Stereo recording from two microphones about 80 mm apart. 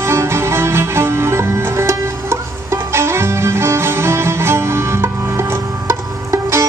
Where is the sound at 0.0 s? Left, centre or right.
Right.